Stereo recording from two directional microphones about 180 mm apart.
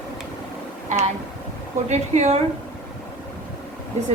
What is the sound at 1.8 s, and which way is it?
Speech, 40° right (ahead or behind).